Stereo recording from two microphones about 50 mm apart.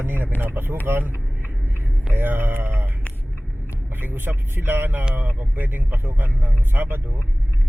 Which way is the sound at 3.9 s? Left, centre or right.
Right.